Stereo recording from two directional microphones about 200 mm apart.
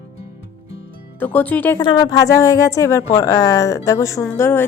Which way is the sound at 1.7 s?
20° left (ahead or behind).